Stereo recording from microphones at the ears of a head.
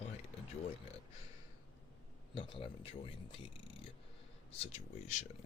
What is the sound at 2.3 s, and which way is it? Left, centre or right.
Speech, left.